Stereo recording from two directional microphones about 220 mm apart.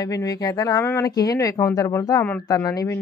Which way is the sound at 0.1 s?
15° left (ahead or behind).